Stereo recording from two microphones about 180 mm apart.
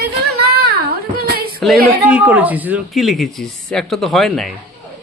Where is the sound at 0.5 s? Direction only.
60° right (ahead or behind).